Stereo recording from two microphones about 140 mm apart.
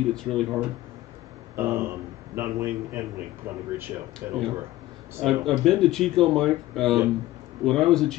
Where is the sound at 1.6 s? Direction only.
15° right (ahead or behind).